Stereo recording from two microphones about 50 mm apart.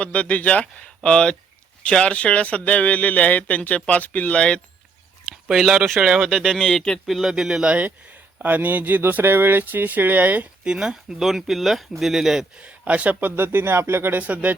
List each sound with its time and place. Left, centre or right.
0.0 s a man's voice: left
5.5 s speech: centre
6.0 s speech: centre
6.3 s speech: centre
7.1 s speech: centre
7.6 s speech: right
10.6 s speech: centre
12.5 s speech: right
14.2 s speech: right